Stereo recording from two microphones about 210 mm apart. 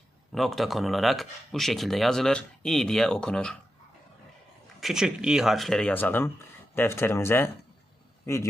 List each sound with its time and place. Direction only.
0.3 s speech: centre (ahead or behind)
4.8 s speech: centre (ahead or behind)